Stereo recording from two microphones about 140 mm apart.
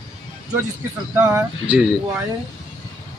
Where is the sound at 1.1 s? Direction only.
15° right (ahead or behind).